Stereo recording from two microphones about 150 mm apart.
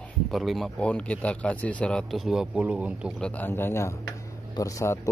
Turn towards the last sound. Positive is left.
turn(degrees=20)  # may be behind; listen again after turning